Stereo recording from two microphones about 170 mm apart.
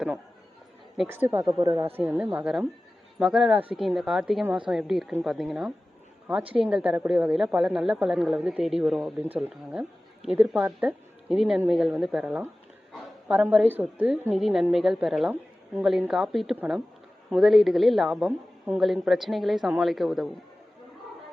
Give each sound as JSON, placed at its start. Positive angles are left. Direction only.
{"t": 1.3, "sound": "a woman's voice", "side_deg": -15}